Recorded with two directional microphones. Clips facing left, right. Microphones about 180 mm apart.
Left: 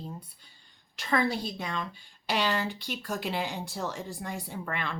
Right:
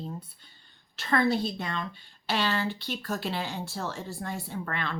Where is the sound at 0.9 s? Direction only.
10° left (ahead or behind).